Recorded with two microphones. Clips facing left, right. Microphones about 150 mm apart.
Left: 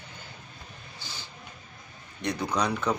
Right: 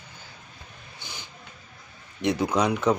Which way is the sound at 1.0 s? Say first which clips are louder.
Right 2 dB; 20° right (ahead or behind).